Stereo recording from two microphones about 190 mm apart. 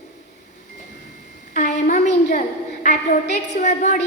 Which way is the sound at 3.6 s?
35° left (ahead or behind).